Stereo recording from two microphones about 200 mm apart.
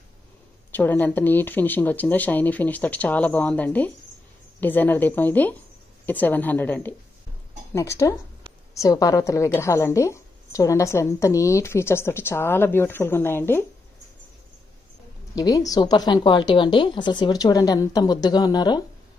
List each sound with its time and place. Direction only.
0.7 s a woman's voice: 10° left (ahead or behind)
15.3 s a woman's voice: 20° left (ahead or behind)